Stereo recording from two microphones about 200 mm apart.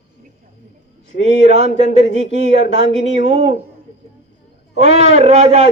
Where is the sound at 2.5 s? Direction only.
60° left (ahead or behind).